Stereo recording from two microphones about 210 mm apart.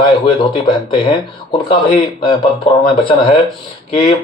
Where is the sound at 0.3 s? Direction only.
20° left (ahead or behind).